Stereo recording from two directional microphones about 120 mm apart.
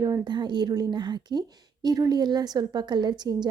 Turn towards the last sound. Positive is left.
turn(degrees=-35)  # may be behind; listen again after turning